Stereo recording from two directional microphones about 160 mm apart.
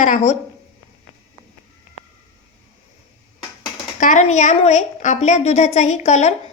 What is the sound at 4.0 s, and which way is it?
A woman's voice, 50° left (ahead or behind).